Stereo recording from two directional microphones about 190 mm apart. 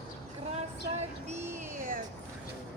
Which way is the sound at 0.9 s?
40° right (ahead or behind).